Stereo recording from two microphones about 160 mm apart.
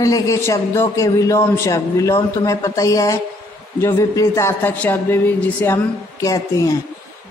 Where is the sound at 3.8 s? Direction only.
15° left (ahead or behind).